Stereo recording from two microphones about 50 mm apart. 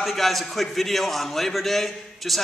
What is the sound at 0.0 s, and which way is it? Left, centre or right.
A man's voice, centre.